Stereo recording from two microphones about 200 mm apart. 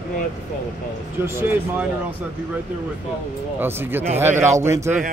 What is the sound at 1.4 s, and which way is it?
Speech, 10° right (ahead or behind).